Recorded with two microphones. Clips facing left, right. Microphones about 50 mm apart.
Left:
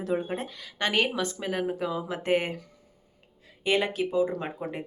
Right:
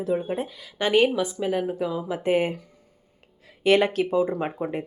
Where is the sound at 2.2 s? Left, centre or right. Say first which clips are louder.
Right 4 dB; centre.